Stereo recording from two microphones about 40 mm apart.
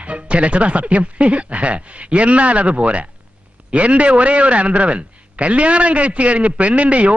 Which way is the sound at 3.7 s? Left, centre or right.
Right.